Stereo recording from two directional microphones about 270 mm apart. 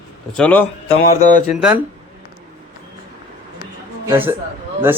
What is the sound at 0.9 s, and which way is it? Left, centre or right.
Mantra, left.